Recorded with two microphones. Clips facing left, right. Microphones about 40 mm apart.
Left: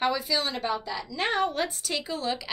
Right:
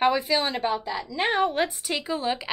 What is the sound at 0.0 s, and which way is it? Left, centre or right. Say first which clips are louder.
Speech: right 4 dB; right.